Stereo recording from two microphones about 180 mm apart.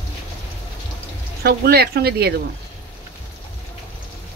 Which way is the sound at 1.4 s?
60° right (ahead or behind).